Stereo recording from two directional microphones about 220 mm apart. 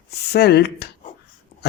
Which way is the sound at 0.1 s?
45° left (ahead or behind).